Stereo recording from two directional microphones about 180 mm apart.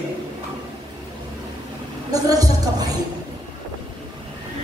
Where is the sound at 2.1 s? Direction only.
20° right (ahead or behind).